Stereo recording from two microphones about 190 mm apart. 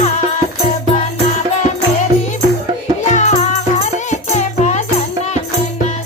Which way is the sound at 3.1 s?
40° left (ahead or behind).